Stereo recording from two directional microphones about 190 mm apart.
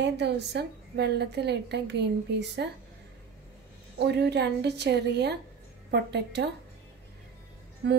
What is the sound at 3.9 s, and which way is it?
A woman's voice, 60° right (ahead or behind).